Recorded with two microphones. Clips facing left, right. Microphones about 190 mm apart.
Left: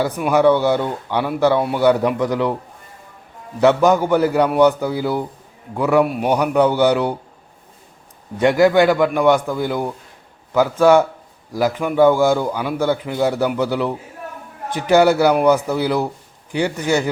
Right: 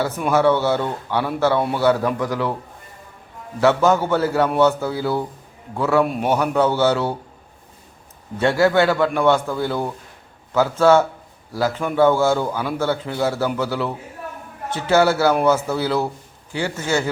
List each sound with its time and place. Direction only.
0.0 s a man's voice: 15° left (ahead or behind)
3.6 s speech: 15° left (ahead or behind)
8.4 s speech: 15° left (ahead or behind)